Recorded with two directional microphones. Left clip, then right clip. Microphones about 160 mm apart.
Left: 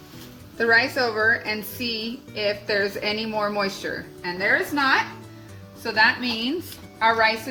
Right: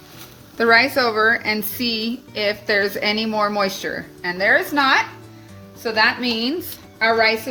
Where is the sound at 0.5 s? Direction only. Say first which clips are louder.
Right 5 dB; 65° right (ahead or behind).